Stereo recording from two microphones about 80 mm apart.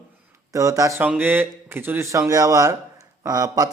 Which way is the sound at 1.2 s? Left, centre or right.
Right.